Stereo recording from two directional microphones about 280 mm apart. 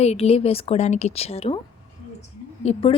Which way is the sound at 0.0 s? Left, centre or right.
Left.